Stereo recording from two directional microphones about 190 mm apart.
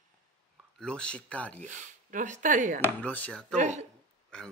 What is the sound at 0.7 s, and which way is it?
Speech, 5° left (ahead or behind).